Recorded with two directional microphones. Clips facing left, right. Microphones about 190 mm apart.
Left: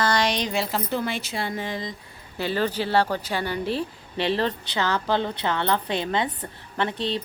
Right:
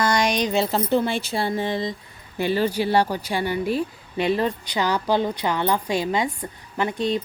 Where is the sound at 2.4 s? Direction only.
15° right (ahead or behind).